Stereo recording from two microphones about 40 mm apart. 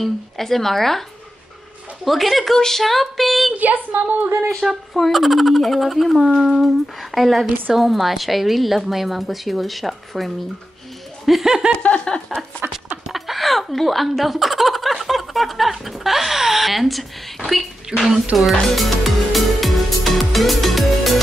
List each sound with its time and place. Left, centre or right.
0.0 s speech: centre
2.0 s speech: centre
2.5 s speech: centre
3.5 s speech: right
4.6 s speech: centre
11.4 s speech: centre
11.7 s a sound: left
13.1 s speech: centre
17.8 s speech: centre
18.3 s music: centre